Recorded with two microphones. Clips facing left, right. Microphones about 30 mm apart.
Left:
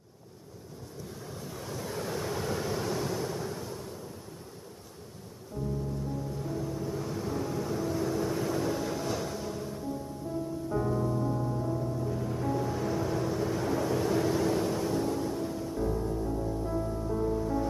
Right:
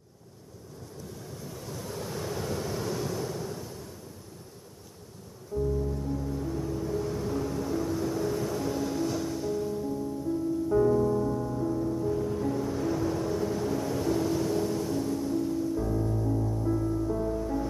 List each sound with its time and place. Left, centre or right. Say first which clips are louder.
1.4 s waves: left 2 dB; centre
5.5 s music: right 7 dB; left
6.5 s vehicle: right 2 dB; centre
15.2 s music: right 4 dB; centre